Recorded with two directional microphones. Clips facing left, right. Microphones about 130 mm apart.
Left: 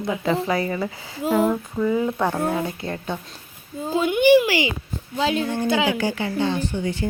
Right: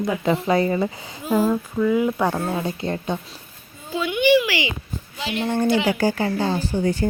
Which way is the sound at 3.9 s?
45° left (ahead or behind).